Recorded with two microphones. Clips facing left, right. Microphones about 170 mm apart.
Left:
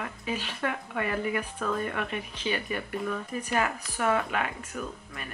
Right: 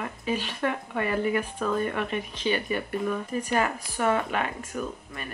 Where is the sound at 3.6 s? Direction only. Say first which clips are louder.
Right 2 dB; 30° right (ahead or behind).